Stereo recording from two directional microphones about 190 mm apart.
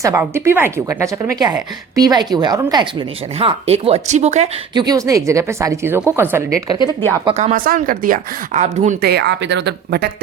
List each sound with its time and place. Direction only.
0.0 s speech: 15° right (ahead or behind); by 4.6 s 35° right (ahead or behind)
4.7 s speech: 20° right (ahead or behind)
7.3 s speech: 35° right (ahead or behind)
9.0 s speech: 60° right (ahead or behind)